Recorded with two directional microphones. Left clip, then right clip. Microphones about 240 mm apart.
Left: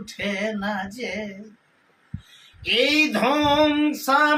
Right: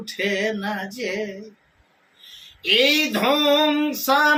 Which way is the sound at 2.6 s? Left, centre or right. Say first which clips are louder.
Right 2 dB; centre.